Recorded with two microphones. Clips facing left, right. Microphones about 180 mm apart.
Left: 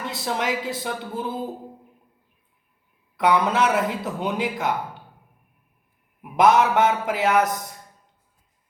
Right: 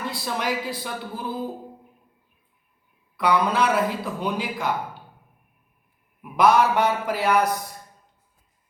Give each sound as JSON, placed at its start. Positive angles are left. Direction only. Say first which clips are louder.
{"t": 0.0, "sound": "a man's voice", "louder": "left 1 dB", "side_deg": 20}
{"t": 3.2, "sound": "a man's voice", "louder": "left 1 dB", "side_deg": 20}
{"t": 6.3, "sound": "a man's voice", "louder": "left 1 dB", "side_deg": 20}